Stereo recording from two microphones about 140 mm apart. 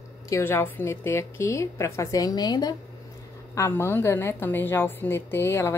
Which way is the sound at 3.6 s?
20° left (ahead or behind).